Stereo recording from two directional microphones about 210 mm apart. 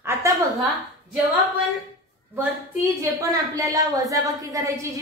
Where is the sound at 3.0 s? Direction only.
15° right (ahead or behind).